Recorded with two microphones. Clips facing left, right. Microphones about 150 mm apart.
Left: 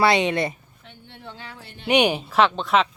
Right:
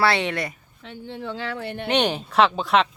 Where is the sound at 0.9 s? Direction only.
90° right; by 1.9 s 60° right (ahead or behind).